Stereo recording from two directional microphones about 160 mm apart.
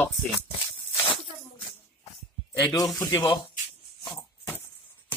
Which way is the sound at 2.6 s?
20° left (ahead or behind).